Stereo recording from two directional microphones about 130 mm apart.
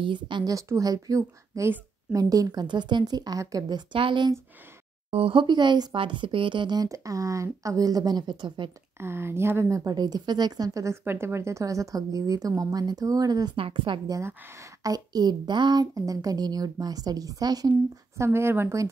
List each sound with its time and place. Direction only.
0.0 s a woman's voice: 35° right (ahead or behind)
9.0 s a woman's voice: 20° right (ahead or behind)
13.6 s a woman's voice: 45° right (ahead or behind)
14.0 s a woman's voice: 25° right (ahead or behind)